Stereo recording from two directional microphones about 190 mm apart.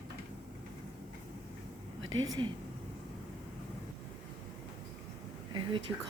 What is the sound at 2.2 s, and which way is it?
Speech, 20° right (ahead or behind).